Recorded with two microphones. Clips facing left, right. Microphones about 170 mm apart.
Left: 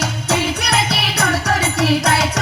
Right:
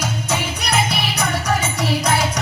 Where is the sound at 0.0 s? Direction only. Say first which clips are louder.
Left 4 dB; 65° left (ahead or behind).